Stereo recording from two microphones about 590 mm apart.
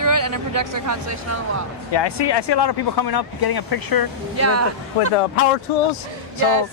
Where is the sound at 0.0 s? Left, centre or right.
Right.